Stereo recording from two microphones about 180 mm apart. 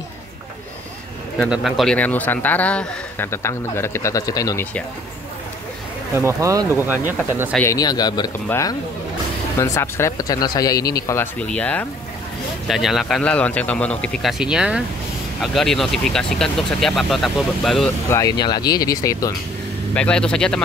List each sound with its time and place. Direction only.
1.4 s a man's voice: centre (ahead or behind); by 4.6 s 20° left (ahead or behind)
6.1 s speech: 15° right (ahead or behind)
7.6 s a man's voice: 20° left (ahead or behind)
11.3 s a man's voice: 5° left (ahead or behind)
18.1 s speech: 20° left (ahead or behind)
19.9 s speech: 5° left (ahead or behind)